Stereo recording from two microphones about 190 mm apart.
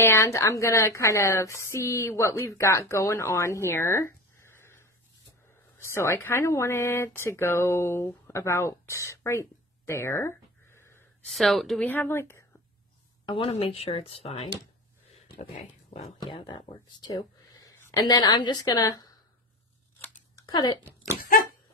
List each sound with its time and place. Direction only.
0.0 s a woman's voice: 15° left (ahead or behind)
11.2 s a woman's voice: centre (ahead or behind)
13.2 s speech: 25° left (ahead or behind)
16.2 s speech: 25° left (ahead or behind)
20.3 s speech: 20° left (ahead or behind)